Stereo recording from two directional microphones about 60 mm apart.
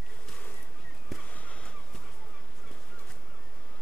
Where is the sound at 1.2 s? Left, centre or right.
Left.